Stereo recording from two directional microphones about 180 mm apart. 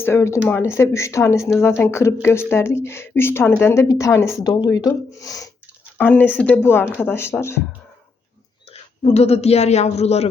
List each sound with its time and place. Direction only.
0.0 s speech: 15° left (ahead or behind)
8.7 s speech: 35° left (ahead or behind)